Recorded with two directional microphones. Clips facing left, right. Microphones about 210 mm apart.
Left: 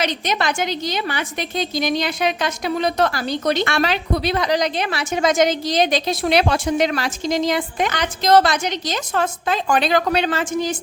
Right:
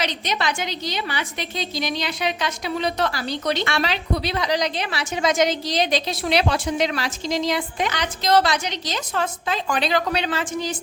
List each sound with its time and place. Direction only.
0.0 s a woman's voice: 50° left (ahead or behind)